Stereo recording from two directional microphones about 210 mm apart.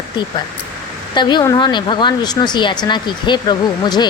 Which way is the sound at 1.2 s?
20° left (ahead or behind).